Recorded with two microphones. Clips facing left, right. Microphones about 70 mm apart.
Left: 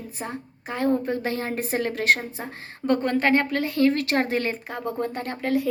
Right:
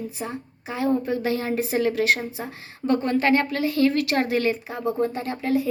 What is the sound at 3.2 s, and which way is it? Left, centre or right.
A woman's voice, left.